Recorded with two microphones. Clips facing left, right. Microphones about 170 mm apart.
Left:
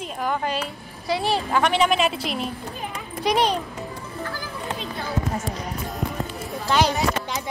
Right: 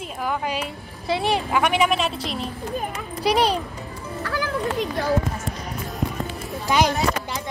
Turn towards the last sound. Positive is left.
turn(degrees=-10)  # may be behind; listen again after turning